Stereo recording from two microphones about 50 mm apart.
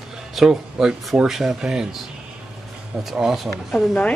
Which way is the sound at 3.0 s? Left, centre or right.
Centre.